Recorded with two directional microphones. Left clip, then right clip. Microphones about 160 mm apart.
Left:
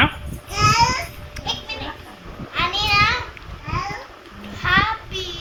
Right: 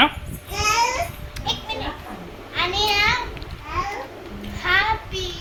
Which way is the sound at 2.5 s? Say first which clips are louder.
Left 2 dB; centre (ahead or behind).